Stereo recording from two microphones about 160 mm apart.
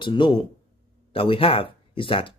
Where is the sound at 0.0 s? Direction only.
30° left (ahead or behind).